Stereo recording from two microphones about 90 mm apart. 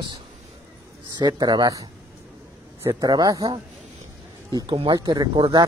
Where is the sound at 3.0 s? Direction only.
45° right (ahead or behind).